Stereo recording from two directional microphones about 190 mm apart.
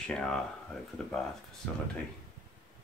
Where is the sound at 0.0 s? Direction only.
5° left (ahead or behind).